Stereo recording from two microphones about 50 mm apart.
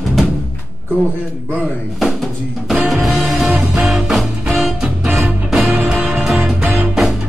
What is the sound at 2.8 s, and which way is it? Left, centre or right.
Music, centre.